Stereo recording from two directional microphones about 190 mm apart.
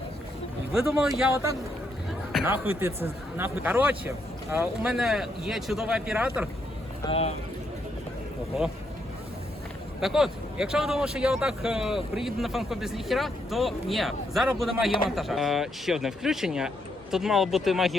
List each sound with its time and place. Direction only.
0.7 s speech: 5° right (ahead or behind)
2.4 s speech: 15° right (ahead or behind)
7.0 s speech: 30° left (ahead or behind)
10.0 s speech: centre (ahead or behind)